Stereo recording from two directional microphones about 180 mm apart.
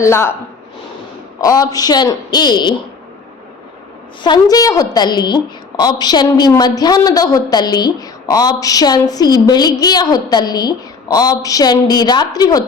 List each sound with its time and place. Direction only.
0.0 s speech: 15° left (ahead or behind)
1.4 s a woman's voice: 20° left (ahead or behind)
4.2 s a woman's voice: 25° left (ahead or behind)